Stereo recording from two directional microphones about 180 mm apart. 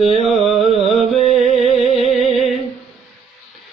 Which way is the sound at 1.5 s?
35° left (ahead or behind).